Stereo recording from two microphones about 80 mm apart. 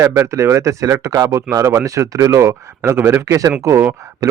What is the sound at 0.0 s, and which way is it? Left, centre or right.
Speech, right.